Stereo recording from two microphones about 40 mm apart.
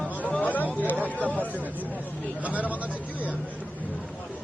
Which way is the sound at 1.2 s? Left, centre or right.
Left.